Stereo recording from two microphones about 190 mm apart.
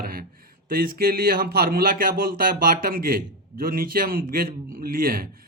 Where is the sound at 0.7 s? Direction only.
50° right (ahead or behind).